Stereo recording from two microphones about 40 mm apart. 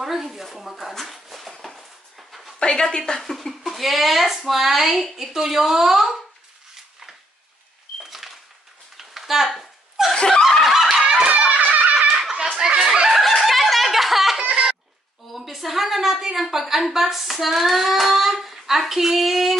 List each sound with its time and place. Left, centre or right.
0.0 s a woman's voice: centre
0.9 s a sound: centre
1.6 s dog: centre
2.6 s speech: left
3.2 s a woman's voice: centre
8.0 s a sound: centre
10.1 s snicker: left
10.6 s a sound: centre
11.2 s music: right
11.9 s snicker: right
12.5 s a sound: centre
13.1 s chicken: centre
15.3 s a woman's voice: centre